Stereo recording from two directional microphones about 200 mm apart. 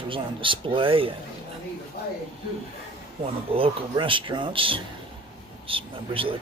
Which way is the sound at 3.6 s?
25° right (ahead or behind).